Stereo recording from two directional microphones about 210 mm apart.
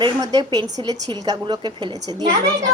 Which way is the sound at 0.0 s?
20° right (ahead or behind).